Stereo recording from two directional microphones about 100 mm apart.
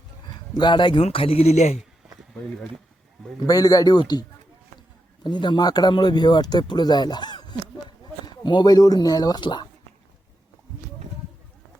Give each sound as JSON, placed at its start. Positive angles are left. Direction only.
{"t": 0.3, "sound": "speech", "side_deg": 45}
{"t": 1.0, "sound": "speech", "side_deg": 70}
{"t": 3.4, "sound": "speech", "side_deg": 40}